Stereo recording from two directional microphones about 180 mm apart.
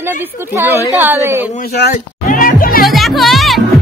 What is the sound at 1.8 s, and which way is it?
Music, 50° left (ahead or behind).